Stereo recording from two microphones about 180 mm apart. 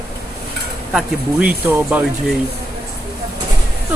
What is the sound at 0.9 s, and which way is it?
Speech, 5° right (ahead or behind).